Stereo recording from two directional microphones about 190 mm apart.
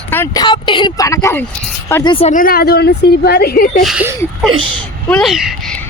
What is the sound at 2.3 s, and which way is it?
A woman's voice, 50° left (ahead or behind).